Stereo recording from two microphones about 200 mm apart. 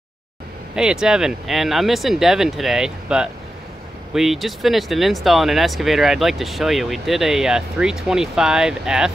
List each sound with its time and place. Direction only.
0.7 s speech: 5° right (ahead or behind)